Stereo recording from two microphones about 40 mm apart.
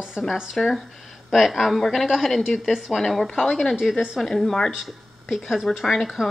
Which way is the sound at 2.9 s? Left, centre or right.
Centre.